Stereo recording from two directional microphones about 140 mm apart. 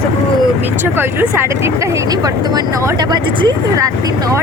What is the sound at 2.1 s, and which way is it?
Speech, 25° right (ahead or behind).